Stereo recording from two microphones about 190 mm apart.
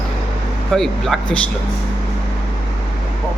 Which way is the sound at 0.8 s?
Centre (ahead or behind).